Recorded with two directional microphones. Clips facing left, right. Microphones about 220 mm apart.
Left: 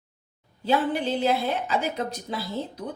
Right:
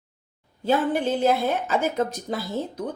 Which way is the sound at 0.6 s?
45° right (ahead or behind).